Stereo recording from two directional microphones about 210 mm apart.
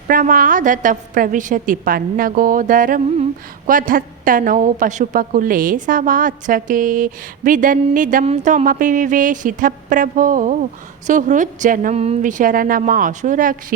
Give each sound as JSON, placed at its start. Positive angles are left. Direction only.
{"t": 0.1, "sound": "speech", "side_deg": -40}